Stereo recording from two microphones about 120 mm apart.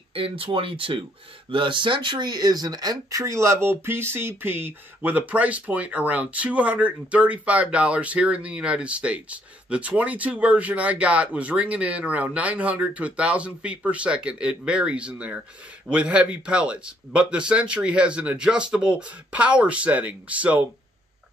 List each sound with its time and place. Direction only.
0.1 s speech: 50° right (ahead or behind); by 20.6 s 10° right (ahead or behind)